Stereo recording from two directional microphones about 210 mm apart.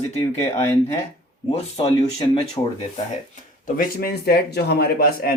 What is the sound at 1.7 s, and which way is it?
Speech, 25° left (ahead or behind).